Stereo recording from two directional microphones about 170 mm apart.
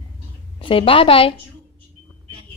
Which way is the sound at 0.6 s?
30° left (ahead or behind).